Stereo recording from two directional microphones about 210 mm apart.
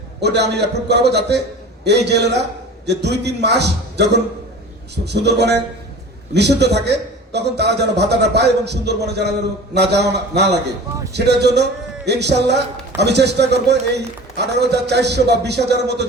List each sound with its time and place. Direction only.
0.2 s a man's voice: 55° right (ahead or behind)